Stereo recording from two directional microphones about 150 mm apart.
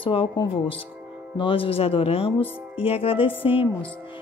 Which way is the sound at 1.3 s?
35° left (ahead or behind).